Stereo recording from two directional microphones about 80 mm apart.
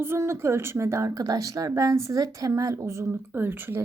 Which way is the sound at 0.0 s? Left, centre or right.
Right.